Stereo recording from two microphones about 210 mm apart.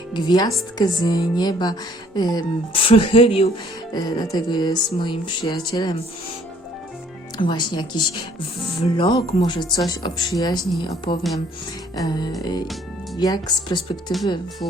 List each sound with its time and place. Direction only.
0.1 s music: 20° left (ahead or behind)
7.3 s music: 20° left (ahead or behind)